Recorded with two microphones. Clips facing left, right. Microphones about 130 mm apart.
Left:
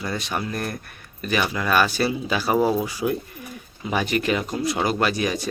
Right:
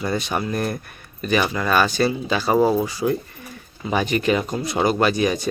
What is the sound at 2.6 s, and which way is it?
Speech, 20° right (ahead or behind).